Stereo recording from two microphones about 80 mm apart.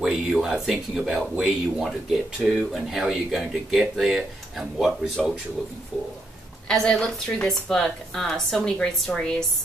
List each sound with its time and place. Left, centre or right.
0.0 s speech: centre
6.7 s a woman's voice: centre